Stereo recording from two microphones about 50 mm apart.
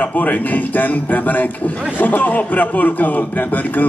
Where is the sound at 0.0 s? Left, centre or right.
Left.